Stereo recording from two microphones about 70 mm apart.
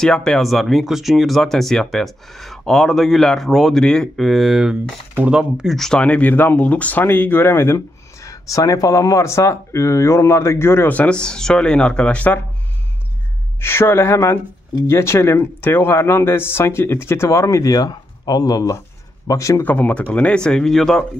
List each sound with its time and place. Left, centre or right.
0.0 s speech: centre
0.5 s speech: centre
5.8 s speech: centre; by 10.9 s left
10.9 s speech: centre
13.6 s speech: left
19.2 s speech: left
19.6 s speech: left; by 21.0 s centre